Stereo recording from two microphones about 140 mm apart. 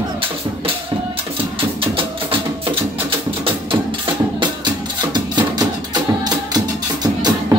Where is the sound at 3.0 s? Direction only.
40° right (ahead or behind).